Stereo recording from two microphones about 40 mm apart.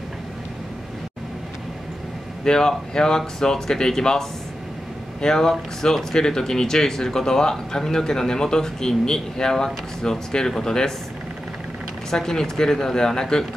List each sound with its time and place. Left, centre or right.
2.4 s speech: centre
12.1 s speech: centre